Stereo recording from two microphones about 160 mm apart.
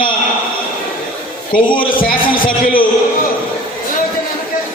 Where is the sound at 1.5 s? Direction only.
65° left (ahead or behind).